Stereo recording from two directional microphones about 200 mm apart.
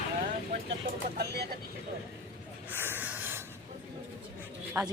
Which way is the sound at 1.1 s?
55° right (ahead or behind).